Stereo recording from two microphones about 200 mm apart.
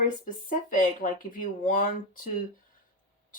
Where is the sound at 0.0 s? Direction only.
40° left (ahead or behind).